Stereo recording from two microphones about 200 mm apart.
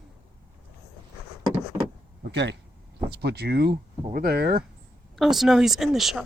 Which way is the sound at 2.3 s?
60° right (ahead or behind).